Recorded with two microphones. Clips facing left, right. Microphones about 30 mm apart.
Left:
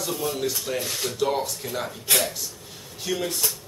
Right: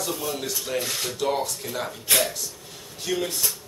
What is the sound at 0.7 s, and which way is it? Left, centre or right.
Speech, centre.